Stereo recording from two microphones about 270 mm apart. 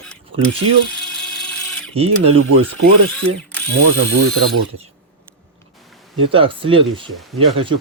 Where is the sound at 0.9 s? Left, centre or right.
Centre.